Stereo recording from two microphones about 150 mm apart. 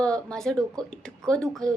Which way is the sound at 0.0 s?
5° left (ahead or behind).